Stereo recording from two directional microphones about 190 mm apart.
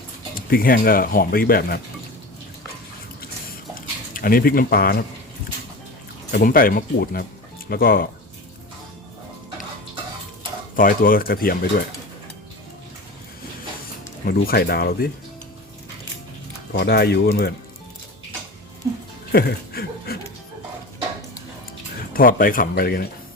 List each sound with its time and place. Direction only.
0.3 s speech: 50° left (ahead or behind)
3.8 s speech: 50° left (ahead or behind)
6.3 s speech: 50° left (ahead or behind)
10.8 s speech: 50° left (ahead or behind)
14.3 s speech: 55° left (ahead or behind)
16.7 s speech: 55° left (ahead or behind)
19.3 s a sound: 55° left (ahead or behind)
22.1 s speech: 50° left (ahead or behind)